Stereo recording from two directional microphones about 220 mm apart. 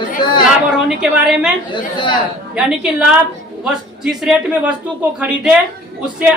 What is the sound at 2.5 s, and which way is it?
A woman's voice, 5° right (ahead or behind).